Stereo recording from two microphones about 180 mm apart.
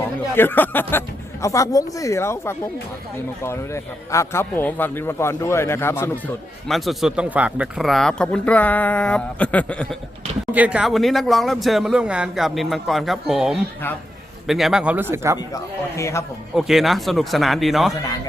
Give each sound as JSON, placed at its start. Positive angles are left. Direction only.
{"t": 0.0, "sound": "a man's voice", "side_deg": 10}
{"t": 6.7, "sound": "speech", "side_deg": 0}
{"t": 10.5, "sound": "speech", "side_deg": -5}
{"t": 15.4, "sound": "a man's voice", "side_deg": 15}
{"t": 16.6, "sound": "speech", "side_deg": 0}